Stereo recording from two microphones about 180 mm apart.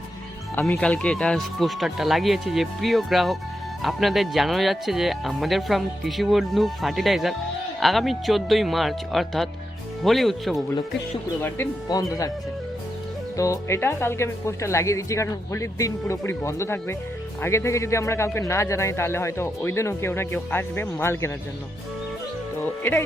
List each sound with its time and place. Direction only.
0.7 s speech: 5° left (ahead or behind)
11.4 s speech: 15° left (ahead or behind)
13.3 s speech: 20° left (ahead or behind)
22.8 s speech: 10° left (ahead or behind)